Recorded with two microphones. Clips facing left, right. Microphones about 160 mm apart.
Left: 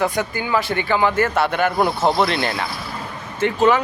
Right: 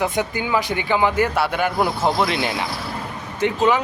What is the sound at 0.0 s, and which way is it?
Speech, 20° right (ahead or behind).